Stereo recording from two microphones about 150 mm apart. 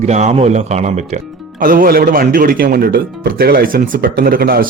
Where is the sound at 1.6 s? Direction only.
70° right (ahead or behind).